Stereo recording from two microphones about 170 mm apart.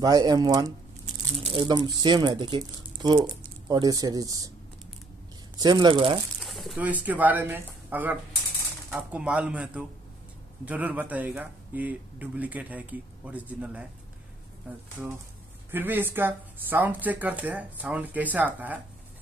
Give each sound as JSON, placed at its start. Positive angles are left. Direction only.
{"t": 0.0, "sound": "speech", "side_deg": -25}
{"t": 5.6, "sound": "speech", "side_deg": -25}
{"t": 6.4, "sound": "speech", "side_deg": 0}
{"t": 15.7, "sound": "speech", "side_deg": -10}